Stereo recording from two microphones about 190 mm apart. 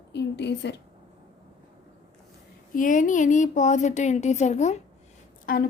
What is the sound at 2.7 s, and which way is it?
Speech, 45° left (ahead or behind).